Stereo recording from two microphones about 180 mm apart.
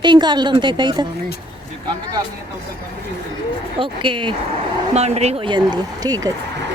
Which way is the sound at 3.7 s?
25° right (ahead or behind).